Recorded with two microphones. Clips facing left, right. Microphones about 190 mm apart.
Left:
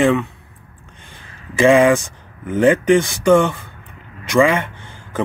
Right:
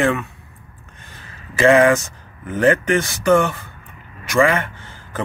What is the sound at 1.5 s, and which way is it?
Speech, 15° left (ahead or behind).